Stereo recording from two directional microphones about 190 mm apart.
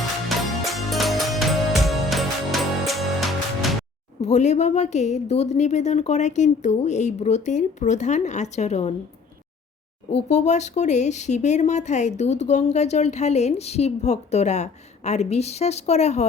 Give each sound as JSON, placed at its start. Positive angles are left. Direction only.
{"t": 0.3, "sound": "music", "side_deg": 0}
{"t": 4.2, "sound": "speech", "side_deg": 35}
{"t": 10.1, "sound": "speech", "side_deg": 35}